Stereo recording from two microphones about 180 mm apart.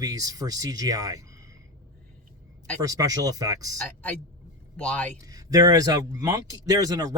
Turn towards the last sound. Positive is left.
turn(degrees=-20)  # may be behind; listen again after turning